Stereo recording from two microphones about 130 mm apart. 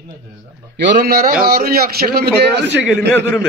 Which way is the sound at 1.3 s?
90° right.